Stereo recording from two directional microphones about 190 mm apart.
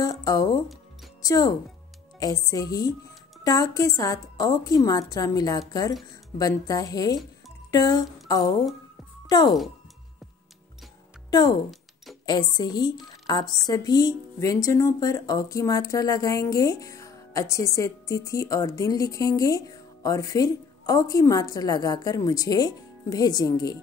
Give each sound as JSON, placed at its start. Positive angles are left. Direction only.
{"t": 0.0, "sound": "a woman's voice", "side_deg": 20}
{"t": 7.7, "sound": "a sound", "side_deg": 20}
{"t": 9.3, "sound": "a woman's voice", "side_deg": 20}
{"t": 11.2, "sound": "a woman's voice", "side_deg": 20}